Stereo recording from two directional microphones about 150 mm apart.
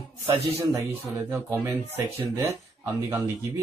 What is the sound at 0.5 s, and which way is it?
A man's voice, 15° right (ahead or behind).